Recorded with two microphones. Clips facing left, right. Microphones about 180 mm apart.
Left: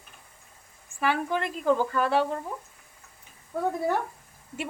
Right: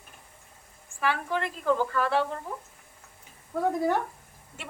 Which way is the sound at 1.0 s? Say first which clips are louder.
Left 2 dB; 15° left (ahead or behind).